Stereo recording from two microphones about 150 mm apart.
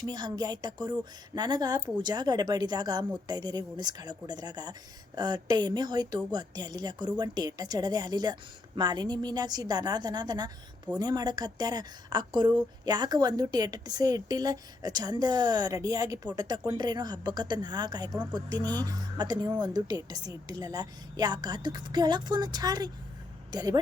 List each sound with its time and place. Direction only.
0.0 s a woman's voice: 25° right (ahead or behind)